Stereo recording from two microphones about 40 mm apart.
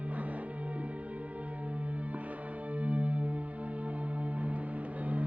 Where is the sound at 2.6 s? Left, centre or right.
Right.